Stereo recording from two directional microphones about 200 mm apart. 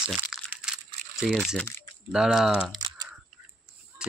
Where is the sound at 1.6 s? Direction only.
15° left (ahead or behind).